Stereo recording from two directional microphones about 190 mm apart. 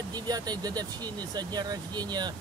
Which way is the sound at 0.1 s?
20° right (ahead or behind).